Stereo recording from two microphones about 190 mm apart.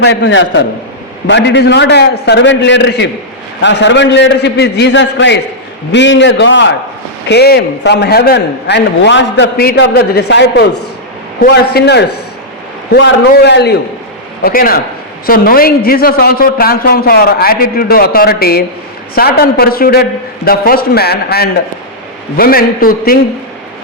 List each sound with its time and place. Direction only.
0.0 s a man's voice: 70° left (ahead or behind)
7.3 s a man's voice: 60° left (ahead or behind)
14.4 s a man's voice: 50° left (ahead or behind)